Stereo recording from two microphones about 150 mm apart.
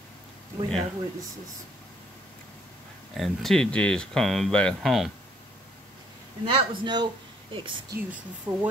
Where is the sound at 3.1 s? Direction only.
Centre (ahead or behind).